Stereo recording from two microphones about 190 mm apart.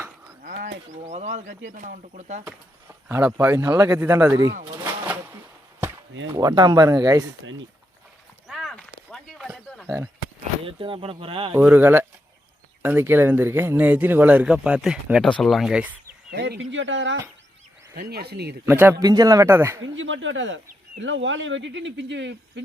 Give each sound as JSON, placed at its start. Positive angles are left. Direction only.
{"t": 0.9, "sound": "speech", "side_deg": -40}
{"t": 3.1, "sound": "speech", "side_deg": -10}
{"t": 4.8, "sound": "a sound", "side_deg": -10}
{"t": 5.8, "sound": "chop", "side_deg": -10}
{"t": 6.2, "sound": "speech", "side_deg": -20}
{"t": 8.4, "sound": "a sound", "side_deg": 0}
{"t": 10.7, "sound": "speech", "side_deg": -30}
{"t": 11.5, "sound": "speech", "side_deg": -10}
{"t": 16.3, "sound": "speech", "side_deg": -65}
{"t": 17.9, "sound": "speech", "side_deg": -55}
{"t": 18.6, "sound": "speech", "side_deg": -10}
{"t": 19.8, "sound": "speech", "side_deg": -85}